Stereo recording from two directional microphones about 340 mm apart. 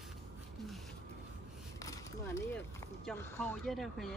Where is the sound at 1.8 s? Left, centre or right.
Centre.